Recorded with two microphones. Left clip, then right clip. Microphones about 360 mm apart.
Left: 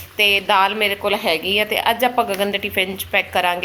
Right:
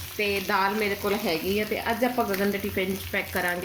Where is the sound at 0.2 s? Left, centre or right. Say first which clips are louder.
Left 10 dB; left.